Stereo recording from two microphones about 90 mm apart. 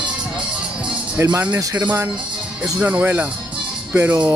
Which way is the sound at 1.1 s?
20° right (ahead or behind).